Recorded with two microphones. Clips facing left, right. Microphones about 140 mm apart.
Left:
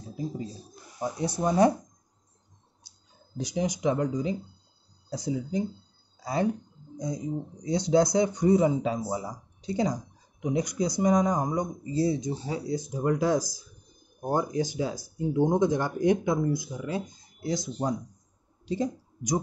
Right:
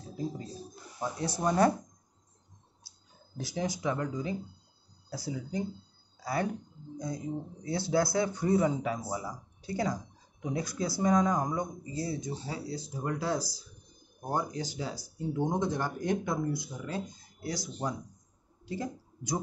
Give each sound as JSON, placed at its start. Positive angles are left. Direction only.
{"t": 1.4, "sound": "speech", "side_deg": 15}
{"t": 3.3, "sound": "speech", "side_deg": 20}
{"t": 7.6, "sound": "speech", "side_deg": 20}
{"t": 17.4, "sound": "speech", "side_deg": 20}